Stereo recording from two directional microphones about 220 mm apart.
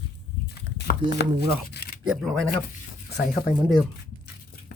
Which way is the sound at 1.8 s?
50° left (ahead or behind).